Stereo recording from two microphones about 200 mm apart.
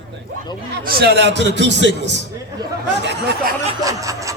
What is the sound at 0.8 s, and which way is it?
A man's voice, 50° right (ahead or behind).